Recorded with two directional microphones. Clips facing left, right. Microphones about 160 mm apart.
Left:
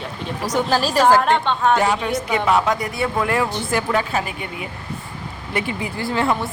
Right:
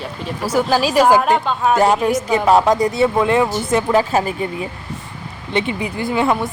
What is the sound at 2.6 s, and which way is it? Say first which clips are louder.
Speech: right 7 dB; 25° right (ahead or behind).